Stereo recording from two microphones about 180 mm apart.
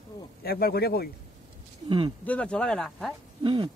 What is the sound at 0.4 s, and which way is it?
Speech, 60° left (ahead or behind).